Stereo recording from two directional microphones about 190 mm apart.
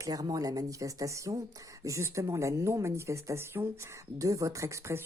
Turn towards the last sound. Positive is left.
turn(degrees=-15)  # may be behind; listen again after turning